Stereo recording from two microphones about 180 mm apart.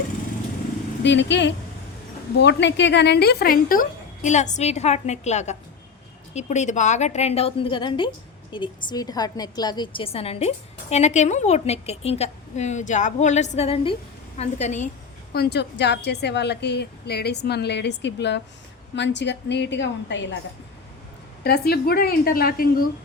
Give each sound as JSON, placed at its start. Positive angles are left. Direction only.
{"t": 1.0, "sound": "a woman's voice", "side_deg": 80}
{"t": 15.3, "sound": "a woman's voice", "side_deg": 65}
{"t": 21.4, "sound": "a woman's voice", "side_deg": 60}